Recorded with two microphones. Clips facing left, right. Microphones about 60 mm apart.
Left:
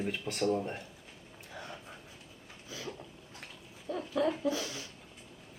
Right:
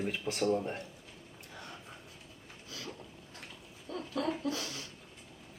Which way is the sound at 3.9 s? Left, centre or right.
Centre.